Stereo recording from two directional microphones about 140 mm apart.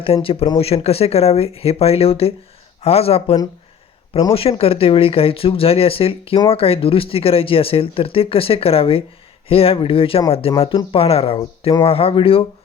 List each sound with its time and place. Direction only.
0.0 s speech: 40° left (ahead or behind)